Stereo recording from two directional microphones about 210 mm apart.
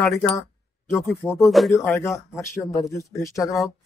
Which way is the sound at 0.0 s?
15° left (ahead or behind).